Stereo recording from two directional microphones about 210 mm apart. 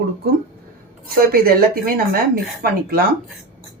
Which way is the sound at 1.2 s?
45° right (ahead or behind).